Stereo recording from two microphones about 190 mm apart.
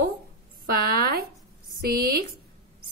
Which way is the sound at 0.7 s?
55° right (ahead or behind).